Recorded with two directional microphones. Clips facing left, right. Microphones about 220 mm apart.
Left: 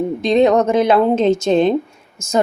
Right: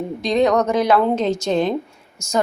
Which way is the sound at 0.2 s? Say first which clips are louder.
Left 3 dB; 25° left (ahead or behind).